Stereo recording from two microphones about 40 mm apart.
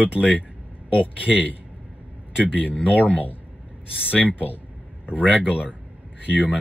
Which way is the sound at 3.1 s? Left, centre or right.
Left.